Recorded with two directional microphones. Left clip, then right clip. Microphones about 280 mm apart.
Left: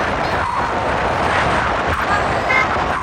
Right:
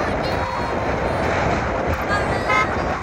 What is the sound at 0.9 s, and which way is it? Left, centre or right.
Vehicle, right.